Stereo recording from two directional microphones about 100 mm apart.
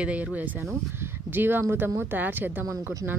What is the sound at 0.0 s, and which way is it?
Speech, 15° right (ahead or behind).